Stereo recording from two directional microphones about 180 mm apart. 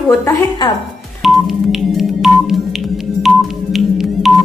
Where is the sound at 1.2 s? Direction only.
Centre (ahead or behind).